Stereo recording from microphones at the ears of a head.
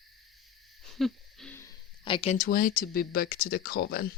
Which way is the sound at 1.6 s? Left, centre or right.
Left.